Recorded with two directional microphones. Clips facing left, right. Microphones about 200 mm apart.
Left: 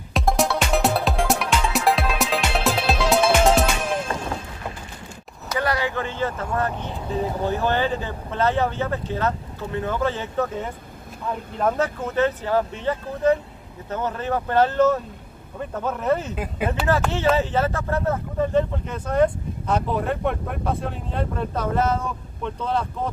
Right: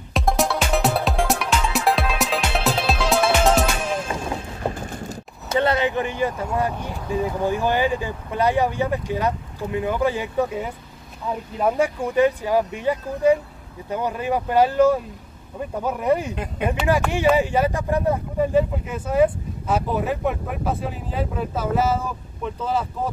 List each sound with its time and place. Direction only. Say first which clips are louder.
0.1 s music: even; centre (ahead or behind)
4.6 s a sound: right 7 dB; 45° right (ahead or behind)
5.5 s speech: right 4 dB; 25° right (ahead or behind)
16.6 s speech: right 1 dB; 5° left (ahead or behind)
17.1 s speech: right 2 dB; 15° right (ahead or behind)